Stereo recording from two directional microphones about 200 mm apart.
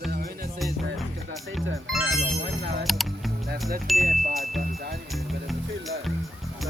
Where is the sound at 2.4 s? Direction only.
60° right (ahead or behind).